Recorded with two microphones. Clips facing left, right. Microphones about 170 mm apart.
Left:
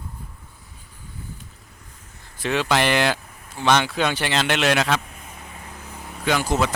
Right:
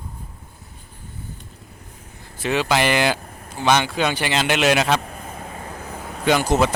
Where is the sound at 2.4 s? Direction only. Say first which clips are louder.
Right 1 dB; 5° right (ahead or behind).